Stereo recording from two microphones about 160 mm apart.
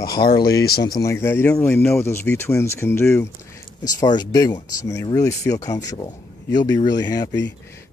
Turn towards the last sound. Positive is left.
turn(degrees=25)  # may be behind; listen again after turning